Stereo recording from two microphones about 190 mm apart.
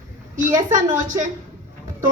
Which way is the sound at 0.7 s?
45° right (ahead or behind).